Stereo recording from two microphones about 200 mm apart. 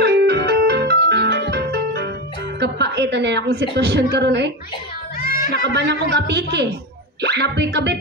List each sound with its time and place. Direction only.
0.0 s music: 55° right (ahead or behind)
2.6 s speech: 55° right (ahead or behind)
5.2 s a sound: 45° left (ahead or behind)
5.6 s speech: 60° right (ahead or behind)